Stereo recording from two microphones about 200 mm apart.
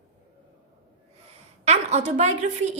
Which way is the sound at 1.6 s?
35° right (ahead or behind).